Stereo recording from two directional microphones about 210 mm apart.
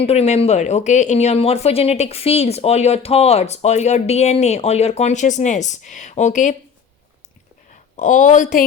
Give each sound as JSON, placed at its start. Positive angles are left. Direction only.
{"t": 0.0, "sound": "speech", "side_deg": 30}
{"t": 7.9, "sound": "speech", "side_deg": 40}